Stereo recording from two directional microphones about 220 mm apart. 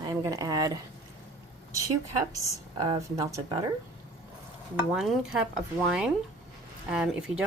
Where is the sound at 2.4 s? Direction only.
20° right (ahead or behind).